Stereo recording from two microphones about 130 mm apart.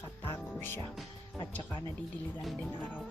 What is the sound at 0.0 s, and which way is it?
Music, 20° left (ahead or behind).